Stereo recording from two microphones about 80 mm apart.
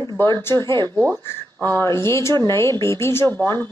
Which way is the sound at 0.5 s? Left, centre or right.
Right.